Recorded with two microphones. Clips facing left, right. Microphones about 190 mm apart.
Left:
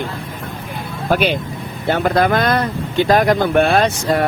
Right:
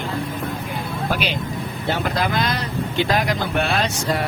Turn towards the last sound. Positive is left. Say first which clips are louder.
# left 6 dB
turn(degrees=55)  # may be behind; listen again after turning